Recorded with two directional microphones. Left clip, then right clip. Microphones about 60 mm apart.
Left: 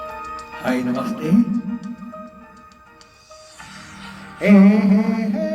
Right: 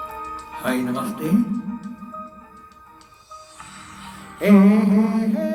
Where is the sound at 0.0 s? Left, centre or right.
Left.